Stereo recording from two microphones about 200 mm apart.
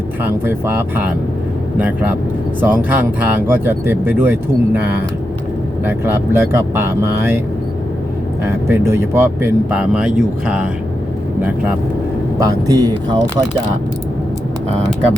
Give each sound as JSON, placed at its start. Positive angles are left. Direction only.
{"t": 0.3, "sound": "speech", "side_deg": -10}
{"t": 8.4, "sound": "speech", "side_deg": -10}
{"t": 12.4, "sound": "speech", "side_deg": -20}